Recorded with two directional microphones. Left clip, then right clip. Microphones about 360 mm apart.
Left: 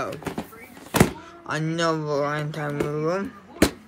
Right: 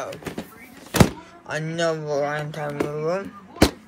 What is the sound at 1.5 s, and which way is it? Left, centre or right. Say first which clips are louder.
Speech: even; centre.